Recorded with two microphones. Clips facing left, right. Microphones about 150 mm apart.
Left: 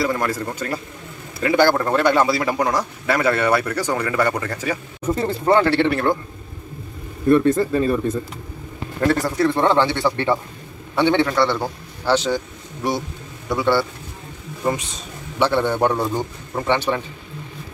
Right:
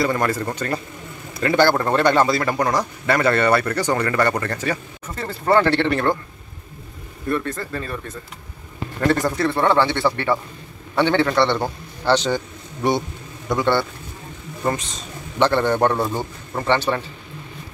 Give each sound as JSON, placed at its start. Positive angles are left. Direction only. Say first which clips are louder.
{"t": 0.0, "sound": "a man's voice", "louder": "right 1 dB", "side_deg": 0}
{"t": 5.0, "sound": "a man's voice", "louder": "left 5 dB", "side_deg": 20}
{"t": 5.7, "sound": "a man's voice", "louder": "left 1 dB", "side_deg": 5}
{"t": 7.2, "sound": "a man's voice", "louder": "left 9 dB", "side_deg": 20}
{"t": 9.0, "sound": "a man's voice", "louder": "left 1 dB", "side_deg": 5}
{"t": 13.5, "sound": "a man's voice", "louder": "left 1 dB", "side_deg": 5}
{"t": 16.0, "sound": "speech", "louder": "left 1 dB", "side_deg": -5}
{"t": 16.5, "sound": "a man's voice", "louder": "even", "side_deg": 10}